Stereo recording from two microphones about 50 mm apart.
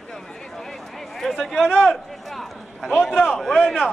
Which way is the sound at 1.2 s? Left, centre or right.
Centre.